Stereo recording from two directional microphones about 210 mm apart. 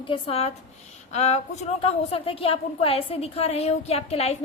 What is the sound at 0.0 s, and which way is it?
A woman's voice, 25° left (ahead or behind).